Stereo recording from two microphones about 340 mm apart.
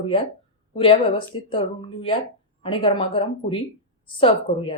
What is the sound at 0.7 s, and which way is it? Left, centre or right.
Speech, centre.